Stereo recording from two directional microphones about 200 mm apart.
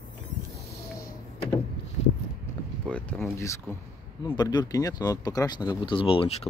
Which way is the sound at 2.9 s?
5° left (ahead or behind).